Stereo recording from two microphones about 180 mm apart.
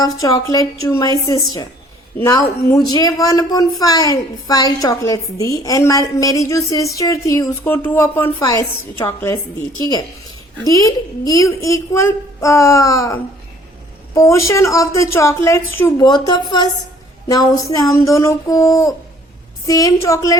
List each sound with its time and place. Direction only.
0.0 s speech: 20° left (ahead or behind)
2.1 s speech: 15° left (ahead or behind)
10.7 s a woman's voice: 20° left (ahead or behind)